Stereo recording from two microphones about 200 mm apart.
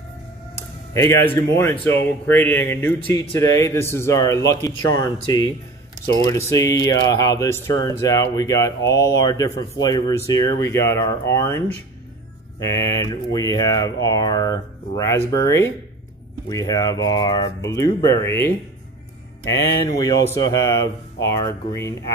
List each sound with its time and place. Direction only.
1.6 s speech: 15° left (ahead or behind)